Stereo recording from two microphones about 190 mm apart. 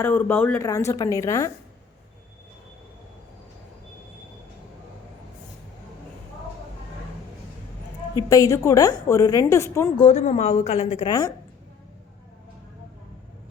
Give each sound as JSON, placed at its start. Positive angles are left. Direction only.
{"t": 0.0, "sound": "a woman's voice", "side_deg": 10}
{"t": 8.3, "sound": "a woman's voice", "side_deg": 20}
{"t": 10.0, "sound": "a woman's voice", "side_deg": 35}